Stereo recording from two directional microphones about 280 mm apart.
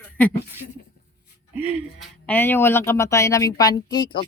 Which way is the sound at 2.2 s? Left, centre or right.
Centre.